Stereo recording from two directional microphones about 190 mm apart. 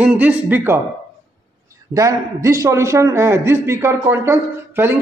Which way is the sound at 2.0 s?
15° right (ahead or behind).